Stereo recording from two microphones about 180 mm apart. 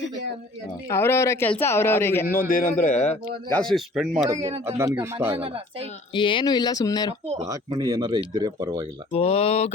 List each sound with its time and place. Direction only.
0.9 s speech: 15° left (ahead or behind)
2.2 s a man's voice: 50° left (ahead or behind)
3.5 s speech: 5° left (ahead or behind)
4.8 s speech: 25° right (ahead or behind)
6.1 s speech: 25° left (ahead or behind)
7.4 s speech: 20° right (ahead or behind)
9.1 s speech: 35° left (ahead or behind)